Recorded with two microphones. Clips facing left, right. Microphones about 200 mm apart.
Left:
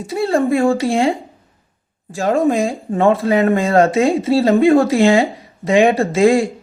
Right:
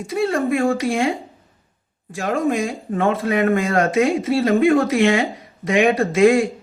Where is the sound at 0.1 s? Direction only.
30° left (ahead or behind).